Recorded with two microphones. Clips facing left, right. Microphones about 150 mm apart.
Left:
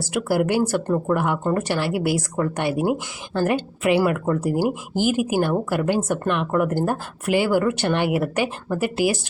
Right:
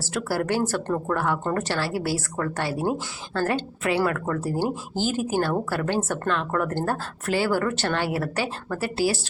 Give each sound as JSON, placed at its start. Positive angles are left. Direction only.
{"t": 0.0, "sound": "speech", "side_deg": 15}